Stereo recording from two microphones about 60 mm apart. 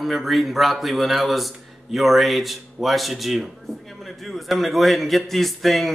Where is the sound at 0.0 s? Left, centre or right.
Centre.